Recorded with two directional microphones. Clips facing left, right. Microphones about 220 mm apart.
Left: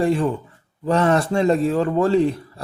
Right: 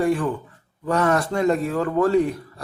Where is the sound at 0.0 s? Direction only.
25° left (ahead or behind).